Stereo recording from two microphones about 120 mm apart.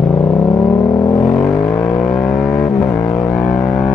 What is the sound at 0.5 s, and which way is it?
Vehicle, 30° left (ahead or behind).